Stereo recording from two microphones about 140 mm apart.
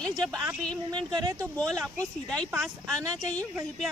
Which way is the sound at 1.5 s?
5° left (ahead or behind).